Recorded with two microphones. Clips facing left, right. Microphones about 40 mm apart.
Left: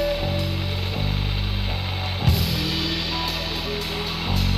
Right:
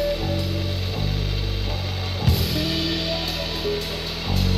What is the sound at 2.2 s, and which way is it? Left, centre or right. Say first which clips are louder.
Music: right 1 dB; centre.